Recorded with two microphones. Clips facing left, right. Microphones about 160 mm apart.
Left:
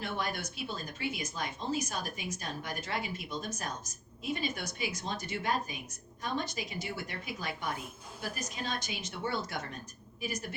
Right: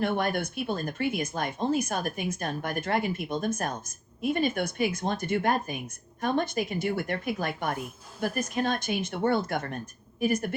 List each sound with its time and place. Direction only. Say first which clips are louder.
0.0 s speech: right 9 dB; 55° right (ahead or behind)